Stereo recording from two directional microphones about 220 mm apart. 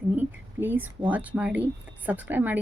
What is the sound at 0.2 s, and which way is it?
A woman's voice, 10° right (ahead or behind).